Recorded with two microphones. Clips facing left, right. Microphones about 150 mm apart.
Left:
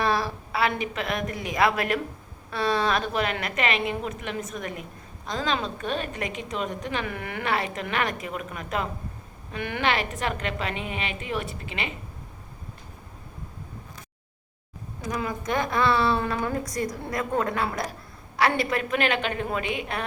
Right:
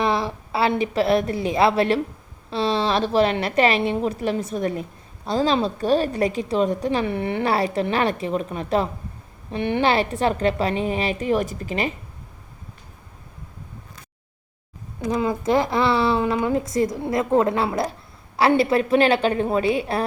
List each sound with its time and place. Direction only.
0.0 s a woman's voice: 20° right (ahead or behind); by 11.9 s 40° right (ahead or behind)
15.1 s a woman's voice: 25° right (ahead or behind)